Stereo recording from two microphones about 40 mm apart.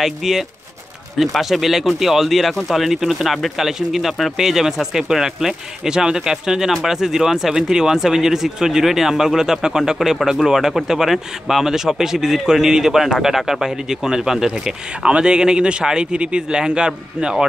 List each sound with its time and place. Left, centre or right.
0.0 s speech: centre
15.0 s a man's voice: right